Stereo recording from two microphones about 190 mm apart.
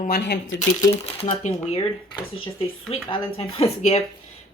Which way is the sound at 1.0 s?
30° left (ahead or behind).